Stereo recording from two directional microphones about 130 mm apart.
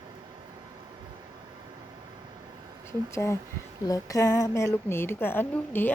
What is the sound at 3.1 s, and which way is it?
A woman's voice, 20° left (ahead or behind).